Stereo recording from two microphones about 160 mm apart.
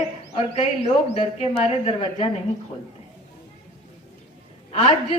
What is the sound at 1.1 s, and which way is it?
A woman's voice, 40° left (ahead or behind).